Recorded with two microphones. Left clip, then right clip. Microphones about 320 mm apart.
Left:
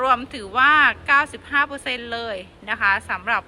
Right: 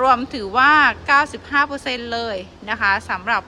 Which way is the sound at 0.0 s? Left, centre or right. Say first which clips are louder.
Right 4 dB; centre.